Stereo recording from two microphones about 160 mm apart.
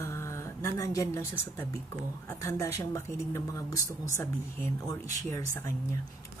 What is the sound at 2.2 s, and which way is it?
A woman's voice, 20° left (ahead or behind).